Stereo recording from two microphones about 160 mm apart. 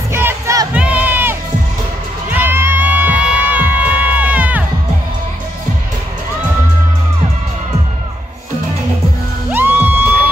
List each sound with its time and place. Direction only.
0.1 s crowd: 15° right (ahead or behind)
2.3 s music: 15° right (ahead or behind)
9.5 s music: 10° right (ahead or behind)